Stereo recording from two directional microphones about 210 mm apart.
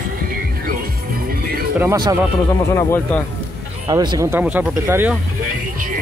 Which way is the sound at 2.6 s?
15° left (ahead or behind).